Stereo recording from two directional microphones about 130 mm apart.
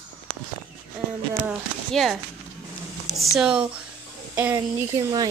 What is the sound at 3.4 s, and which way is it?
Speech, 5° right (ahead or behind).